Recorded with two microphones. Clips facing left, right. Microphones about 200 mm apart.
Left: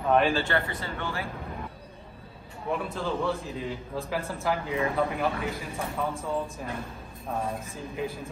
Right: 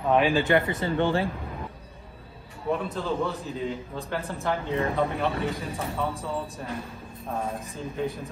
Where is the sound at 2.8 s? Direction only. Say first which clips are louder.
Right 2 dB; centre (ahead or behind).